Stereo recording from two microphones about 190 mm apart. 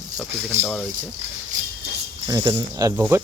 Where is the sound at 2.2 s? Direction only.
20° right (ahead or behind).